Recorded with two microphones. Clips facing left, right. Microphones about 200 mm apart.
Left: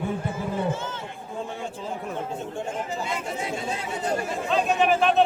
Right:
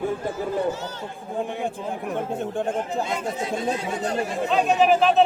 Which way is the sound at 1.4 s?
15° right (ahead or behind).